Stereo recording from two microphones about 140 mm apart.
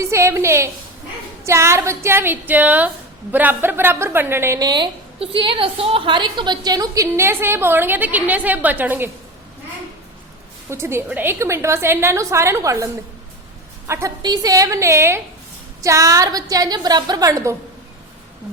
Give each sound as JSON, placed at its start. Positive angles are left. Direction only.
{"t": 0.0, "sound": "a woman's voice", "side_deg": -20}
{"t": 10.7, "sound": "a woman's voice", "side_deg": -20}